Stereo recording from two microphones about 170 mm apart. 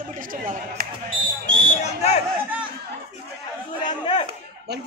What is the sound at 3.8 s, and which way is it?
Chatter, 30° left (ahead or behind).